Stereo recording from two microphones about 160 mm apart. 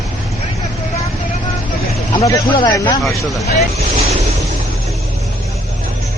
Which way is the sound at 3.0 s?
Centre (ahead or behind).